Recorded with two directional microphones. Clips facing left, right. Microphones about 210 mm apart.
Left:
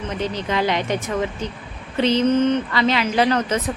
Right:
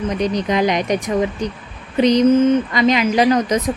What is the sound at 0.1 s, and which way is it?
Speech, 15° right (ahead or behind).